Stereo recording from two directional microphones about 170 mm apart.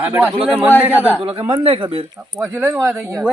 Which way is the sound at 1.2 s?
30° right (ahead or behind).